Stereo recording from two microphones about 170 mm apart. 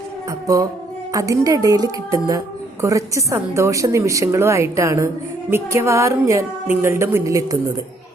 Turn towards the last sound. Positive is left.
turn(degrees=-20)  # may be behind; listen again after turning